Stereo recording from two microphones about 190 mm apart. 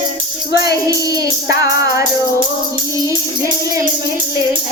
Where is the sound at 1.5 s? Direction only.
15° right (ahead or behind).